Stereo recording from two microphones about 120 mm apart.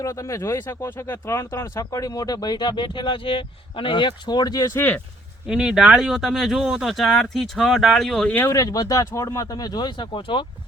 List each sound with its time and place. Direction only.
0.0 s speech: 30° left (ahead or behind)
1.8 s speech: 30° left (ahead or behind)
5.5 s speech: 5° right (ahead or behind)
8.4 s speech: 30° left (ahead or behind); by 10.4 s 45° left (ahead or behind)